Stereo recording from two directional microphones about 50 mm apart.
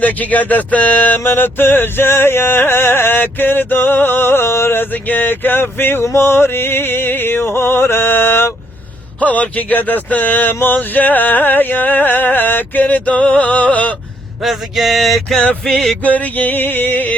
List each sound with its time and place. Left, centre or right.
0.0 s a sound: left
9.2 s music: left
14.4 s male singing: centre
15.6 s music: centre
16.0 s music: left